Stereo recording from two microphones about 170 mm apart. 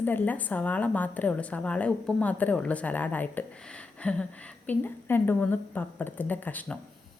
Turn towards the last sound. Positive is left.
turn(degrees=10)  # may be behind; listen again after turning